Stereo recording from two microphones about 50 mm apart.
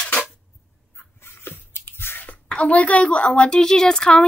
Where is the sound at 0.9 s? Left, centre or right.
Left.